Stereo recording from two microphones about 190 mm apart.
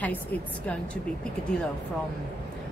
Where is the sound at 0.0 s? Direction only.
10° left (ahead or behind).